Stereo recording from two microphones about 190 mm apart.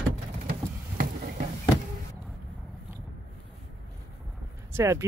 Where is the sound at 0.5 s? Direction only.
50° right (ahead or behind).